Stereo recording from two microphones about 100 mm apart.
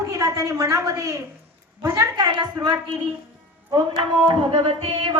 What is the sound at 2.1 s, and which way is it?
Music, 45° right (ahead or behind).